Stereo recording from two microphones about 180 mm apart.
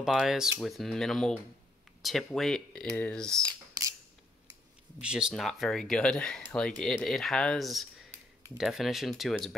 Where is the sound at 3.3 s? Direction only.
20° right (ahead or behind).